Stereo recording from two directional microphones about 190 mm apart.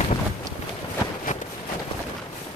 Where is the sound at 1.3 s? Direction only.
40° left (ahead or behind).